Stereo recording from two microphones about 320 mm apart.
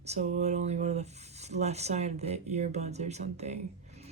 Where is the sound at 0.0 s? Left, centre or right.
Centre.